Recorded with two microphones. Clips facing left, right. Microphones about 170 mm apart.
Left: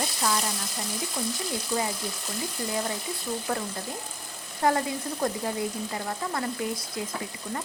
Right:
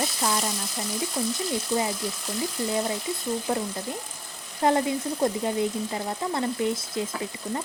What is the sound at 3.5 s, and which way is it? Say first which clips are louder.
Speech: right 3 dB; 20° right (ahead or behind).